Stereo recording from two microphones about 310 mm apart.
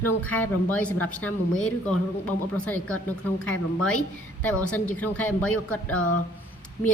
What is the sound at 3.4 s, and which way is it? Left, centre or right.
Speech, left.